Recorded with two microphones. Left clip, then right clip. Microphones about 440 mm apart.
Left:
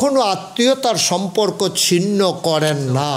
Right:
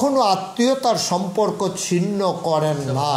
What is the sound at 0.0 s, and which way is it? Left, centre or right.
A man's voice, left.